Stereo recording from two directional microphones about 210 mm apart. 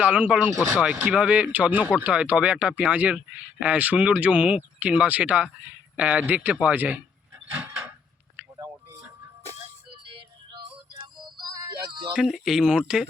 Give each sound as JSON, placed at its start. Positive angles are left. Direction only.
{"t": 0.0, "sound": "speech", "side_deg": -5}
{"t": 8.4, "sound": "a sound", "side_deg": -10}
{"t": 11.5, "sound": "music", "side_deg": -20}
{"t": 12.1, "sound": "speech", "side_deg": 0}